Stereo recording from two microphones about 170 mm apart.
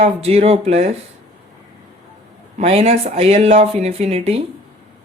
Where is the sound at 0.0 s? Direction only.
40° right (ahead or behind).